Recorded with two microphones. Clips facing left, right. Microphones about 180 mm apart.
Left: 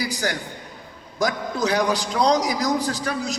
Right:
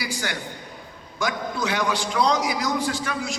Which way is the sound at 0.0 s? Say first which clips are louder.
Left 4 dB; 40° left (ahead or behind).